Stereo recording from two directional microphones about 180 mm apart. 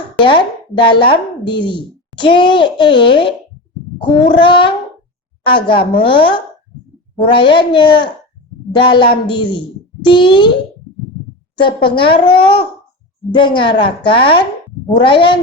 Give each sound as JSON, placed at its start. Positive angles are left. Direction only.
{"t": 0.2, "sound": "speech", "side_deg": 25}
{"t": 11.9, "sound": "speech", "side_deg": 30}